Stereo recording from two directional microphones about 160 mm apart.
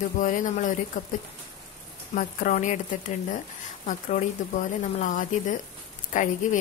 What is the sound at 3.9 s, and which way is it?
A woman's voice, 55° left (ahead or behind).